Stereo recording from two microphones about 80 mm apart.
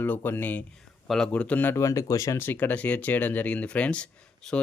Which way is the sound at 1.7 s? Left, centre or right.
Left.